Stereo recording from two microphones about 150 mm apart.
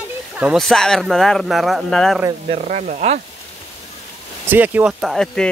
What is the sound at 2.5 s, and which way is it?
Speech, 50° right (ahead or behind).